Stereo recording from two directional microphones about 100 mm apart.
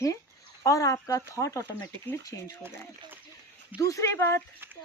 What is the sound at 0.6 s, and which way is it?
Speech, 30° left (ahead or behind).